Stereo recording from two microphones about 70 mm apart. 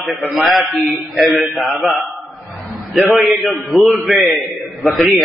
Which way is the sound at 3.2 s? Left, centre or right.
Centre.